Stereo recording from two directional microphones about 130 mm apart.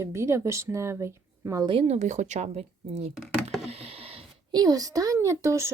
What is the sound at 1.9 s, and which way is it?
Speech, 65° right (ahead or behind).